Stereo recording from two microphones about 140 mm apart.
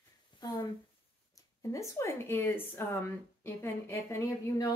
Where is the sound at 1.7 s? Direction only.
20° left (ahead or behind).